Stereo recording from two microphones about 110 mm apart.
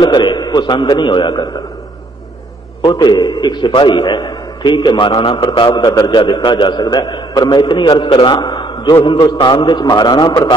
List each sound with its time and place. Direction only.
0.0 s a man's voice: 45° left (ahead or behind)
2.8 s a man's voice: 40° left (ahead or behind)
5.7 s a man's voice: 30° left (ahead or behind)
5.9 s a man's voice: 45° left (ahead or behind)